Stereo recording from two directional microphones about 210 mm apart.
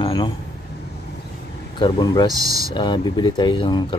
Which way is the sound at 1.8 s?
20° left (ahead or behind).